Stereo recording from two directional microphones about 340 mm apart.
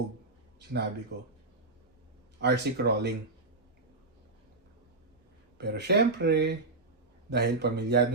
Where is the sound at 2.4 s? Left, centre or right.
Right.